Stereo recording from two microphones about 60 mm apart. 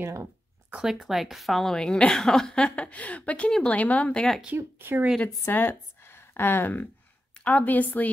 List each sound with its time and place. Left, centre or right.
0.0 s speech: right
0.8 s a woman's voice: centre
2.5 s speech: centre
4.6 s speech: right
5.5 s a woman's voice: left